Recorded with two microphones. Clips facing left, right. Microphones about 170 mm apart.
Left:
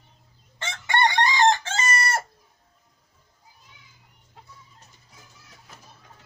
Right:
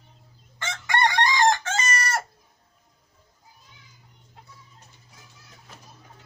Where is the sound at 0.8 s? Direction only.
25° left (ahead or behind).